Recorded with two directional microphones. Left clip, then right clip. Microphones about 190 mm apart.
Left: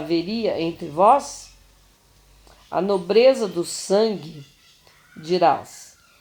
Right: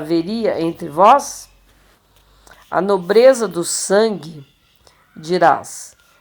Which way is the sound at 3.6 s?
50° right (ahead or behind).